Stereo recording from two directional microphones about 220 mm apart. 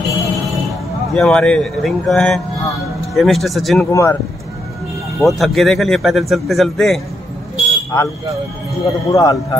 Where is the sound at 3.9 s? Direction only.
15° left (ahead or behind).